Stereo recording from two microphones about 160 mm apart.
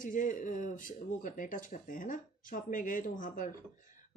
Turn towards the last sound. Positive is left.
turn(degrees=55)  # may be behind; listen again after turning